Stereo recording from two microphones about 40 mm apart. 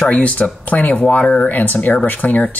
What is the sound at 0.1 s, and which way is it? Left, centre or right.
Speech, left.